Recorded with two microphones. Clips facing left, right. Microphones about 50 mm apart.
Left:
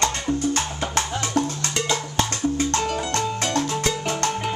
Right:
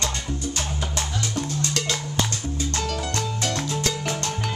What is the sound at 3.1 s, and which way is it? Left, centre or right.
Music, left.